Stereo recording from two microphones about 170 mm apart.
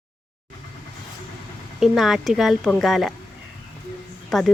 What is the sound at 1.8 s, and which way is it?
Speech, centre (ahead or behind).